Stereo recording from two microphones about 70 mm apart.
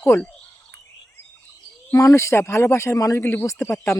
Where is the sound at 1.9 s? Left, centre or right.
Left.